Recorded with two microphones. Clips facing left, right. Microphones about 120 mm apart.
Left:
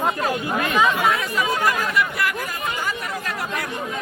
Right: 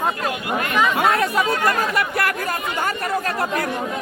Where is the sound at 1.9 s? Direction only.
55° right (ahead or behind).